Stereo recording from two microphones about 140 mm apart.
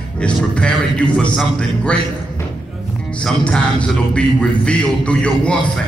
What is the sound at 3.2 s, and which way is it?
A man's voice, 5° left (ahead or behind).